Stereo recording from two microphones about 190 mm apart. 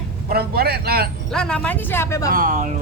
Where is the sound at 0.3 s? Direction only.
55° right (ahead or behind).